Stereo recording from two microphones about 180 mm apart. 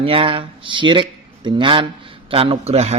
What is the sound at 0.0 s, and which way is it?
Speech, 30° right (ahead or behind).